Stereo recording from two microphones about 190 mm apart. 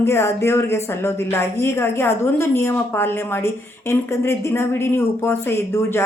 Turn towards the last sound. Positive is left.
turn(degrees=15)  # may be behind; listen again after turning